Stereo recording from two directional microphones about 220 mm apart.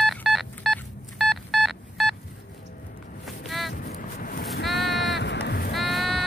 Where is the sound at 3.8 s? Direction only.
40° left (ahead or behind).